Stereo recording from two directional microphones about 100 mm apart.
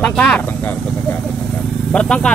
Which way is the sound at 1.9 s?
10° left (ahead or behind).